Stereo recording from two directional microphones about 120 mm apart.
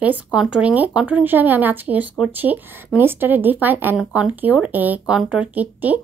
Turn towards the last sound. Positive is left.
turn(degrees=-15)  # may be behind; listen again after turning